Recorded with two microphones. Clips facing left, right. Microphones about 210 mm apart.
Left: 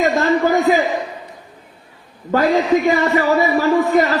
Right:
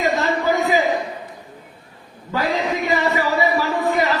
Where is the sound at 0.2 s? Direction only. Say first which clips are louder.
Left 4 dB; 50° left (ahead or behind).